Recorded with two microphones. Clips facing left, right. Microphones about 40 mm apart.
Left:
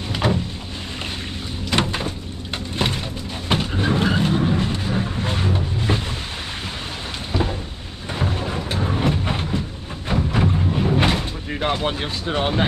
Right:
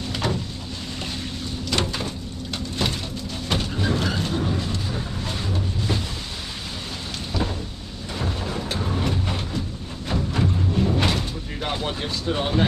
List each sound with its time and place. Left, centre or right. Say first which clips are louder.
0.1 s vehicle: left 5 dB; left
1.7 s door: left 4 dB; left
2.8 s music: left 3 dB; left
3.4 s vehicle: left 4 dB; left
7.3 s a sound: left 4 dB; left
8.1 s vehicle: left 4 dB; left
10.0 s a sound: left 3 dB; left